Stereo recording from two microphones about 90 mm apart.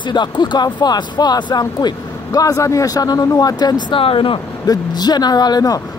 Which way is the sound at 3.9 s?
80° left.